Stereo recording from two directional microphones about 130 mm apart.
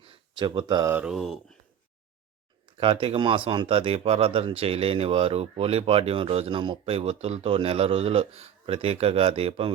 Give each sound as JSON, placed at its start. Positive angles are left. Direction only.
{"t": 0.0, "sound": "a sound", "side_deg": -40}
{"t": 0.9, "sound": "mantra", "side_deg": -5}
{"t": 2.7, "sound": "speech", "side_deg": -45}